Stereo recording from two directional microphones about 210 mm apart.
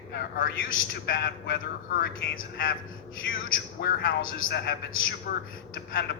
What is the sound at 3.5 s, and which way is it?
A man's voice, 45° left (ahead or behind).